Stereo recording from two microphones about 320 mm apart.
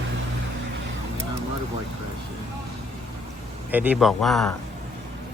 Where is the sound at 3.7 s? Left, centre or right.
Centre.